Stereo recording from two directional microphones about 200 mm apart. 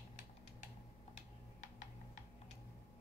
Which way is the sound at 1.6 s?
35° left (ahead or behind).